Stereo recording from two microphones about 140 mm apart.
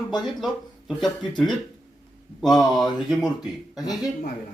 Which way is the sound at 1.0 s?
30° left (ahead or behind).